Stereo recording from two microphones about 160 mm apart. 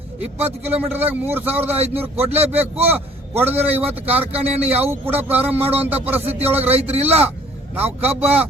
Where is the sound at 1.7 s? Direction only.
40° right (ahead or behind).